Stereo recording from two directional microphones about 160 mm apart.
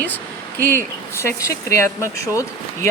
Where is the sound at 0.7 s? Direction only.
15° left (ahead or behind).